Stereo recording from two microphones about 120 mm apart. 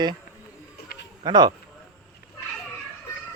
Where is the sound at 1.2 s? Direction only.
35° right (ahead or behind).